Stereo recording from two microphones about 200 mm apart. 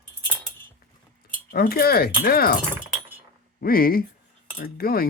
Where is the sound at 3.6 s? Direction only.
45° left (ahead or behind).